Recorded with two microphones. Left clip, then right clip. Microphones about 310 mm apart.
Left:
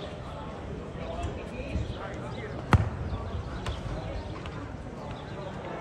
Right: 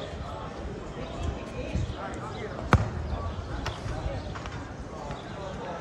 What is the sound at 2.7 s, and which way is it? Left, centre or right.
Basketball bounce, right.